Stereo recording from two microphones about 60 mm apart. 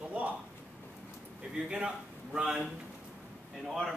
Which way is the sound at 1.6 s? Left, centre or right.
Centre.